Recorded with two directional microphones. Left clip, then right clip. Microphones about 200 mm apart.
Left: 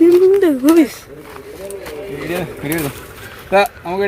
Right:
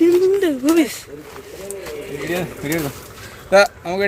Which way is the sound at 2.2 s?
10° left (ahead or behind).